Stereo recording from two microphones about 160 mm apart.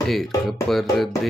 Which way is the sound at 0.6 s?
Centre (ahead or behind).